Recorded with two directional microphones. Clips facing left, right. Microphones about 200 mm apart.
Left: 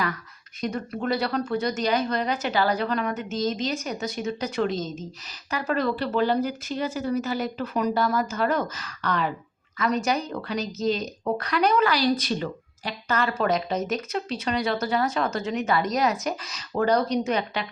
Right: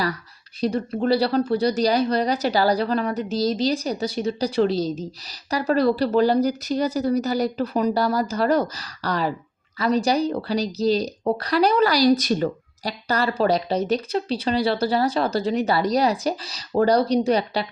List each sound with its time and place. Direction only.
0.6 s speech: 30° right (ahead or behind)